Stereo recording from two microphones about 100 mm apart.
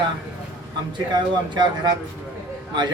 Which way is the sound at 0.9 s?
50° right (ahead or behind).